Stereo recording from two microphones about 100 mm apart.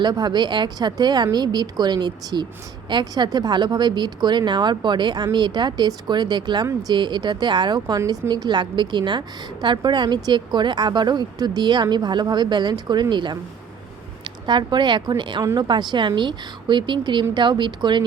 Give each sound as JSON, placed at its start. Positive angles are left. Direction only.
{"t": 0.0, "sound": "a woman's voice", "side_deg": -45}
{"t": 14.4, "sound": "a woman's voice", "side_deg": -50}